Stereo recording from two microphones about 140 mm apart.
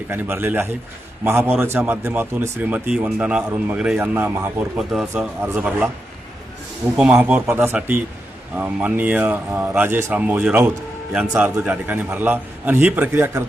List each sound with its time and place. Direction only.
0.1 s a man's voice: 15° right (ahead or behind)
4.8 s a man's voice: centre (ahead or behind)
6.9 s a man's voice: 5° right (ahead or behind)